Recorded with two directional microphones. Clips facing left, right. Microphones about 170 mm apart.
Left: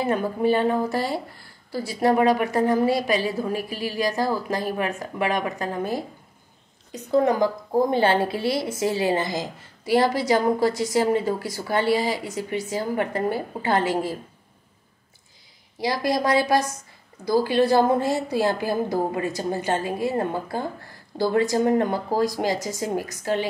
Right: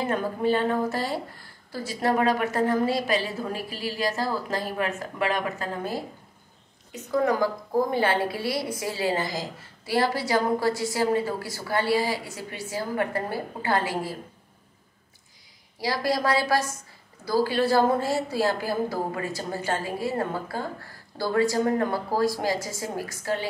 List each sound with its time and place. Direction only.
0.0 s a woman's voice: 15° left (ahead or behind)
6.9 s a woman's voice: 25° left (ahead or behind)
15.8 s a woman's voice: 20° left (ahead or behind)